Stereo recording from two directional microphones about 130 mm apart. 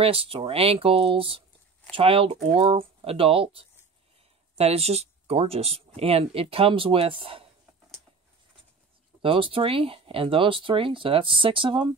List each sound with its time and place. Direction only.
0.0 s speech: 45° right (ahead or behind)
9.2 s speech: 45° right (ahead or behind)